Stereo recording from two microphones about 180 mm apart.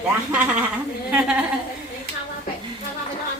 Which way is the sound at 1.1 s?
5° right (ahead or behind).